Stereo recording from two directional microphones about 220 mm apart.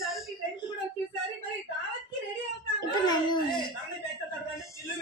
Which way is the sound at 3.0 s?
20° left (ahead or behind).